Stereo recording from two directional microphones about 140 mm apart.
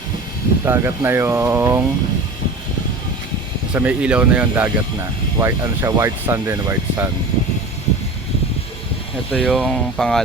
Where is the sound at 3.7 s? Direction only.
10° right (ahead or behind).